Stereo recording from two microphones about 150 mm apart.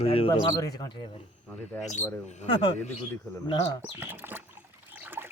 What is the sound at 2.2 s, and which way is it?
Speech, 45° left (ahead or behind).